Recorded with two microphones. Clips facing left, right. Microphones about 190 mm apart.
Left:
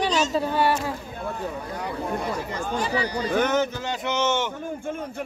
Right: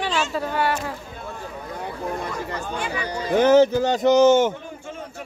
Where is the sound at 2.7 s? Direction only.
35° left (ahead or behind).